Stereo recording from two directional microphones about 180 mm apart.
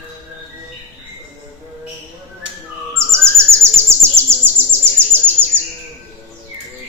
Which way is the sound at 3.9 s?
15° right (ahead or behind).